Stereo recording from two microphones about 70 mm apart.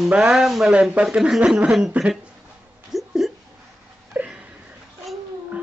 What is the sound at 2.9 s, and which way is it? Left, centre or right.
Hiccup, centre.